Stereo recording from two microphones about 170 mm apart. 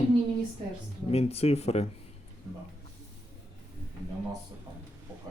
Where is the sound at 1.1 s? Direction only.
35° left (ahead or behind).